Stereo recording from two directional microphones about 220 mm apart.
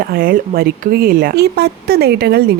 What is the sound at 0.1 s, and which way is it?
Speech, 40° right (ahead or behind).